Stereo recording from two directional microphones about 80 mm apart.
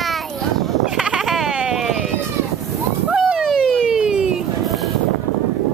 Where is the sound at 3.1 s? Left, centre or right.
Centre.